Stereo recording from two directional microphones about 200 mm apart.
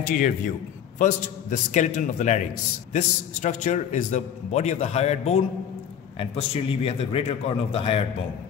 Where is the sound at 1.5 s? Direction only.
40° left (ahead or behind).